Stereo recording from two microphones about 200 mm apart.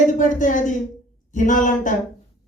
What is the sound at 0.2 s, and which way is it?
Speech, 40° left (ahead or behind).